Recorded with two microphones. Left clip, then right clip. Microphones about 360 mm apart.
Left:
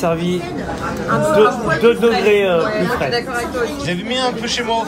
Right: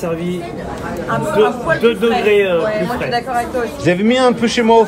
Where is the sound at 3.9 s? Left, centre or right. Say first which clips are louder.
Right 10 dB; centre.